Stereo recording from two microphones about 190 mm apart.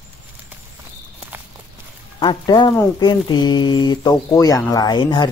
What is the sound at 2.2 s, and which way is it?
Speech, 25° left (ahead or behind).